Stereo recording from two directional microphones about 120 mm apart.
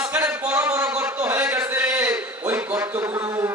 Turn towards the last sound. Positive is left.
turn(degrees=-20)  # may be behind; listen again after turning